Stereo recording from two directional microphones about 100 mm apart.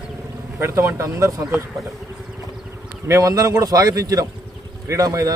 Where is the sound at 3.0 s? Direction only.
30° right (ahead or behind).